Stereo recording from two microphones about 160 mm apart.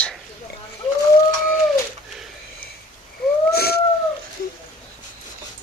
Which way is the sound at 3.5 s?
80° left.